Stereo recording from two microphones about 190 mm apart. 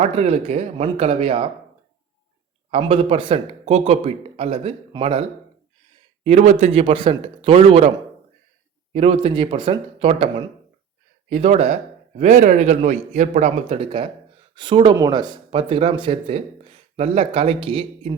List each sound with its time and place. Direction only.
0.0 s speech: 35° right (ahead or behind)
2.6 s speech: 30° right (ahead or behind)
6.2 s speech: 35° right (ahead or behind)
8.9 s a man's voice: 30° right (ahead or behind)